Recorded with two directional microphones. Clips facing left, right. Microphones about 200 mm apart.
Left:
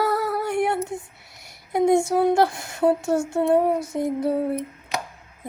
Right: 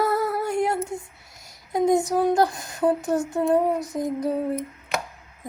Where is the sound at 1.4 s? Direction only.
25° left (ahead or behind).